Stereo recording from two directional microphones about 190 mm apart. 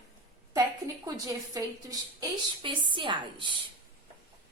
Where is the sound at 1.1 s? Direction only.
20° right (ahead or behind).